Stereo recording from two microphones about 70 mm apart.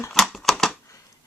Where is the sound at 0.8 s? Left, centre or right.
Left.